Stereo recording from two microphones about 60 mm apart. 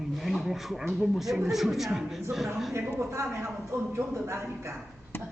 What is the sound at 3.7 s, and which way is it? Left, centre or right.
Speech, right.